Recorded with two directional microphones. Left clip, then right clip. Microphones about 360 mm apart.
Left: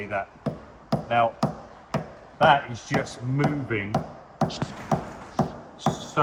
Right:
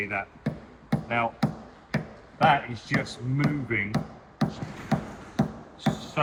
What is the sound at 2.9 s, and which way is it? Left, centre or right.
Speech, centre.